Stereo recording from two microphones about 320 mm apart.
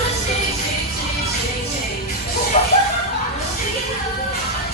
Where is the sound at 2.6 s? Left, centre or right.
Left.